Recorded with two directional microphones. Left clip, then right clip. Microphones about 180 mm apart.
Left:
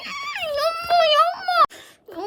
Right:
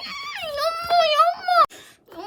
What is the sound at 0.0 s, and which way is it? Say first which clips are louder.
Wail: left 3 dB; 15° left (ahead or behind).